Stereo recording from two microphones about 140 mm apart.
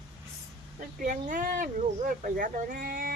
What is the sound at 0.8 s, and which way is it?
Speech, 70° right (ahead or behind).